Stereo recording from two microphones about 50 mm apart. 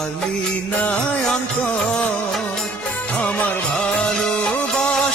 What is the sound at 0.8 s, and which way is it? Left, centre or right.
Music, left.